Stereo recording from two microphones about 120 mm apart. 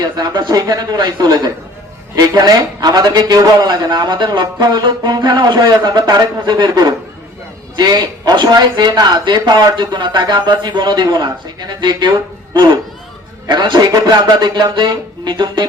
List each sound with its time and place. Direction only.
0.0 s a man's voice: 35° right (ahead or behind)